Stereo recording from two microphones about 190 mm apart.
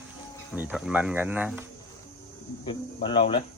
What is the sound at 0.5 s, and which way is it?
Speech, 10° right (ahead or behind).